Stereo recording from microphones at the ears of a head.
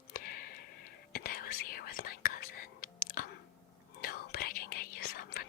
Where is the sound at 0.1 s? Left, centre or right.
Left.